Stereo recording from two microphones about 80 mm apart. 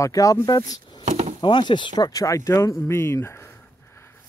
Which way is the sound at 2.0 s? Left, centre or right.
Left.